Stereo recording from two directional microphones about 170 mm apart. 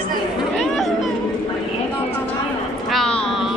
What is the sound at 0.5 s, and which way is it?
Chatter, centre (ahead or behind).